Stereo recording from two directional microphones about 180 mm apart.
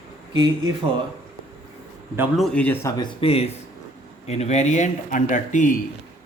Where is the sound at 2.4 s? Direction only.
5° left (ahead or behind).